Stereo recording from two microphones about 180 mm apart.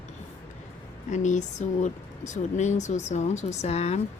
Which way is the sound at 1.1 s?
40° left (ahead or behind).